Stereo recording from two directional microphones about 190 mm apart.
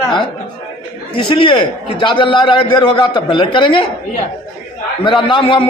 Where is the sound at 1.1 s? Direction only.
25° left (ahead or behind).